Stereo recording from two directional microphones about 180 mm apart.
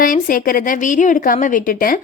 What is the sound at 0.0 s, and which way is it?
A woman's voice, 50° left (ahead or behind).